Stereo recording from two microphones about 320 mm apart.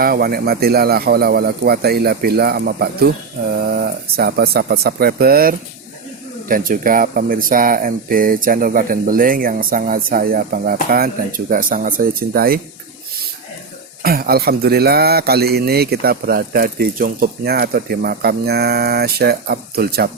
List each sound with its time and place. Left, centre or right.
0.0 s speech: right
14.0 s speech: right